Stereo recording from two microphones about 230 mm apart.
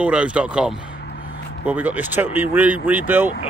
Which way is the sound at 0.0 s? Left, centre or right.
Centre.